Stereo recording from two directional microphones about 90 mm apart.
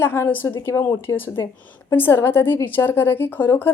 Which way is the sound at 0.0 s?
25° left (ahead or behind).